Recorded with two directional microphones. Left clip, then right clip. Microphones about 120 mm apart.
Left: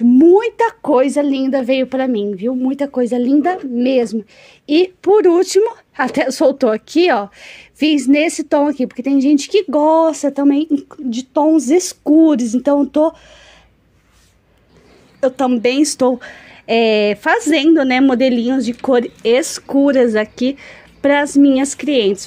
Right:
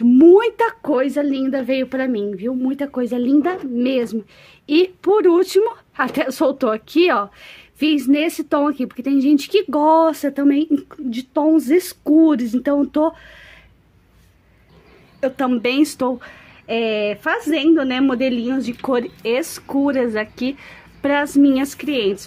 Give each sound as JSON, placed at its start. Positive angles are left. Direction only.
{"t": 0.1, "sound": "a sound", "side_deg": 0}
{"t": 0.8, "sound": "a woman's voice", "side_deg": 30}
{"t": 10.7, "sound": "a woman's voice", "side_deg": 0}
{"t": 11.1, "sound": "a woman's voice", "side_deg": 15}
{"t": 15.1, "sound": "a woman's voice", "side_deg": 25}
{"t": 16.6, "sound": "a woman's voice", "side_deg": 45}